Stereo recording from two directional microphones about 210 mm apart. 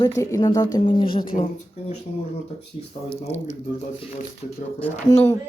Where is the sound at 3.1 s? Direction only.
30° left (ahead or behind).